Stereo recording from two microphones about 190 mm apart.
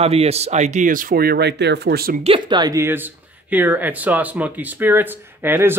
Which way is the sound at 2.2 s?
25° right (ahead or behind).